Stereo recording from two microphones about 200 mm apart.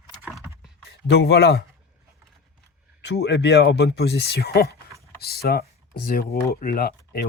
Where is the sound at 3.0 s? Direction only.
60° left (ahead or behind).